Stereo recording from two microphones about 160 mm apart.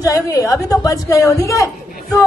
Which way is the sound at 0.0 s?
20° left (ahead or behind).